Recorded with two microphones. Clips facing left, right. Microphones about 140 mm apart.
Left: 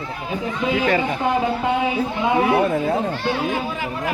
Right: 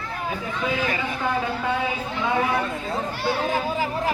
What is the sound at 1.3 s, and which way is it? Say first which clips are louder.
Speech: left 4 dB; 20° left (ahead or behind).